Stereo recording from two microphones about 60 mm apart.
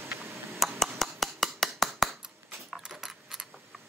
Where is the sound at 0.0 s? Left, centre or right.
Right.